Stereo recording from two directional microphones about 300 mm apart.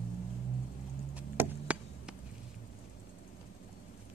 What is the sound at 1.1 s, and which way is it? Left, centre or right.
Chop, centre.